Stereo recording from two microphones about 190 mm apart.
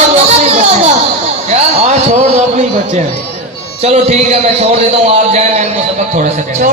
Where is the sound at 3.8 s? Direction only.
35° right (ahead or behind).